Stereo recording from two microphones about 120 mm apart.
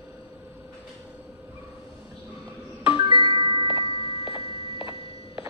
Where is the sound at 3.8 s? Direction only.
55° left (ahead or behind).